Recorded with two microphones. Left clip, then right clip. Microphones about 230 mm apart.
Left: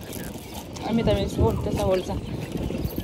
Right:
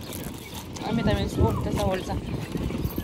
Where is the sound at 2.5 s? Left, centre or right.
Centre.